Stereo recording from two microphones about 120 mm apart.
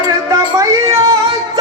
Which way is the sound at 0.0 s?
30° right (ahead or behind).